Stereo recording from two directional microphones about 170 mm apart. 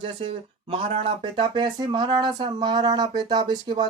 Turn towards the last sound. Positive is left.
turn(degrees=-25)  # may be behind; listen again after turning